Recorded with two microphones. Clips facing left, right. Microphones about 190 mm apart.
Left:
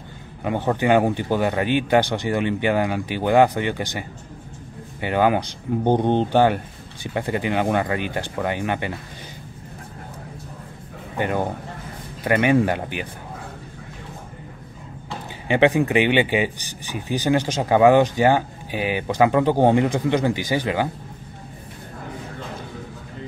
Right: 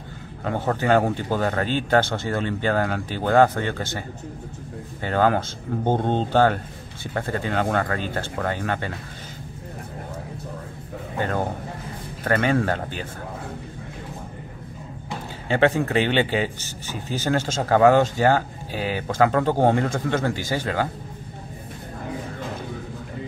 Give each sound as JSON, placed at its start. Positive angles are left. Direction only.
{"t": 0.4, "sound": "a man's voice", "side_deg": 15}
{"t": 5.0, "sound": "a man's voice", "side_deg": 15}
{"t": 12.2, "sound": "a man's voice", "side_deg": 15}
{"t": 15.4, "sound": "a man's voice", "side_deg": 15}